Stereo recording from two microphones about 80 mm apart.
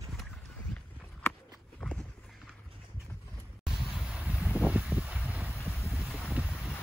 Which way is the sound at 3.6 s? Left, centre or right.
Centre.